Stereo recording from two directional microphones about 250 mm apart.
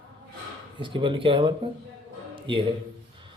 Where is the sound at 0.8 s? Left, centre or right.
Centre.